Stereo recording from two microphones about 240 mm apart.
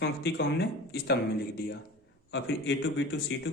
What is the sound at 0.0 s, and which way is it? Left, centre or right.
Speech, left.